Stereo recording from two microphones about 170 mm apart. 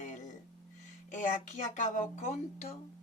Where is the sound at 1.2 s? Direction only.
45° left (ahead or behind).